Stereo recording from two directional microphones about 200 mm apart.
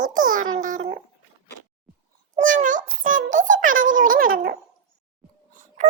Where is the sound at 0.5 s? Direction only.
40° right (ahead or behind).